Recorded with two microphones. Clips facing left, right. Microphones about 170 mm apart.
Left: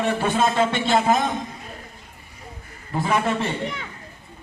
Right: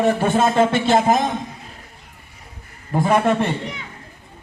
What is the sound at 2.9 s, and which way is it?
Speech, 45° right (ahead or behind).